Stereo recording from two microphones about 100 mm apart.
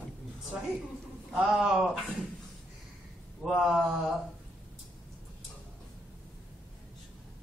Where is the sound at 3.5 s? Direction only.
5° right (ahead or behind).